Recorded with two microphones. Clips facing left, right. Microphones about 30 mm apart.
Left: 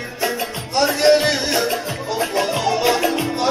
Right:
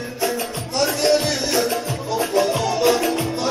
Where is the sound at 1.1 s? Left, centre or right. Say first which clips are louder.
Left 3 dB; left.